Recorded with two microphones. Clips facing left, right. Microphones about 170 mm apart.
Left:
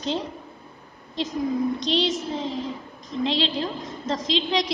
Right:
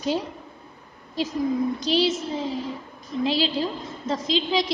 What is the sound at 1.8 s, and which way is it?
A woman's voice, 5° right (ahead or behind).